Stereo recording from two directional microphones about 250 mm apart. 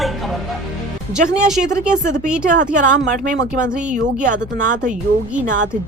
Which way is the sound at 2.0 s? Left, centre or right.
Right.